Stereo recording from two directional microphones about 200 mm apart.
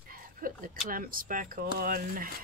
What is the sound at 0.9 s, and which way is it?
Speech, 45° right (ahead or behind).